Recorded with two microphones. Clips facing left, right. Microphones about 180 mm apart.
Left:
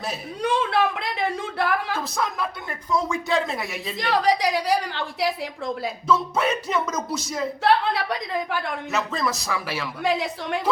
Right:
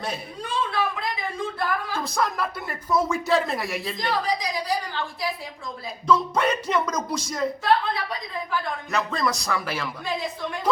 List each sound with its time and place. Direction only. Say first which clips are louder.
0.4 s speech: left 5 dB; 75° left (ahead or behind)
2.0 s speech: right 1 dB; centre (ahead or behind)
4.1 s a woman's voice: left 7 dB; 80° left
6.1 s speech: right 1 dB; 5° left (ahead or behind)
7.6 s speech: left 4 dB; 75° left (ahead or behind)
8.9 s speech: right 1 dB; 5° left (ahead or behind)
10.0 s speech: left 4 dB; 75° left (ahead or behind)